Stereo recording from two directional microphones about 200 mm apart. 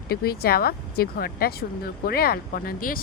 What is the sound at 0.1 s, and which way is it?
Speech, 50° left (ahead or behind).